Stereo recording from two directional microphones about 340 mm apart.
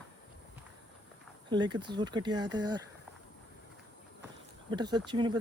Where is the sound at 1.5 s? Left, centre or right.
Centre.